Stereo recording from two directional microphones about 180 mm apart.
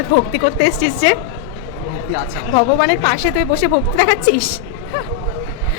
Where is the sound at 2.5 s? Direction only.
55° left (ahead or behind).